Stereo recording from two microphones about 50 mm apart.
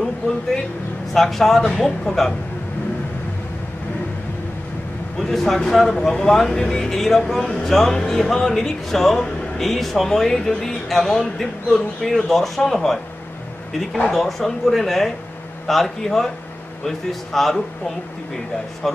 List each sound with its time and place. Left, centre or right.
1.1 s speech: centre
5.3 s speech: centre
14.1 s speech: centre
18.8 s speech: centre